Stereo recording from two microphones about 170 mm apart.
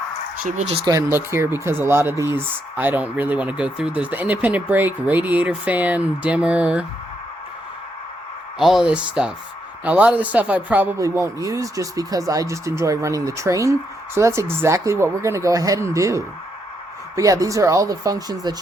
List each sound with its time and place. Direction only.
0.4 s speech: 45° right (ahead or behind)
0.9 s speech: 15° right (ahead or behind)
8.5 s speech: centre (ahead or behind); by 18.5 s 20° right (ahead or behind)